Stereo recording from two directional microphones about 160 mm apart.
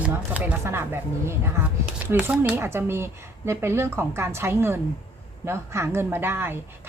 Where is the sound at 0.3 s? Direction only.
10° right (ahead or behind).